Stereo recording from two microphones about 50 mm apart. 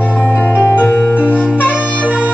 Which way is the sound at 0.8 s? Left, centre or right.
Left.